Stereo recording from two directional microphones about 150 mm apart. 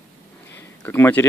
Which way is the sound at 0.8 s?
15° left (ahead or behind).